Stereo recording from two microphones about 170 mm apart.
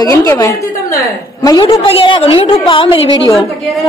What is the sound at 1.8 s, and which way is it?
A woman's voice, 30° left (ahead or behind).